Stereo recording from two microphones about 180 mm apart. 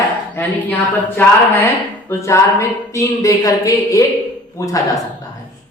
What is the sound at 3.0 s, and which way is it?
Speech, 20° left (ahead or behind).